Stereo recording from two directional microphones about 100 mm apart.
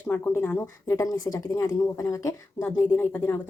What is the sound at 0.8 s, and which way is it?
A woman's voice, 35° left (ahead or behind).